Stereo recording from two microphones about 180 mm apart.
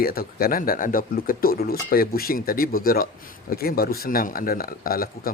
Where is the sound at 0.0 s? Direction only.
55° left (ahead or behind).